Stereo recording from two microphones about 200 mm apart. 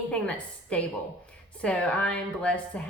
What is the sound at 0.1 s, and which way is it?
A woman's voice, 5° left (ahead or behind).